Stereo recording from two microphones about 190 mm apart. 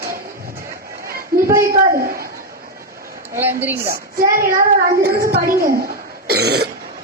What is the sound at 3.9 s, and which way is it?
A woman's voice, 45° right (ahead or behind).